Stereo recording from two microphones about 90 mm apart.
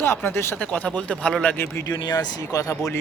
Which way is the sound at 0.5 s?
15° left (ahead or behind).